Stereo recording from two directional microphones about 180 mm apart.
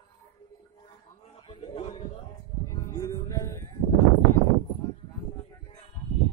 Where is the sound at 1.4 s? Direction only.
25° left (ahead or behind).